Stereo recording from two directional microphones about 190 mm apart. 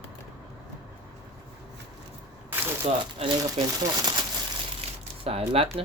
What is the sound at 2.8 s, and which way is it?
Speech, 30° right (ahead or behind).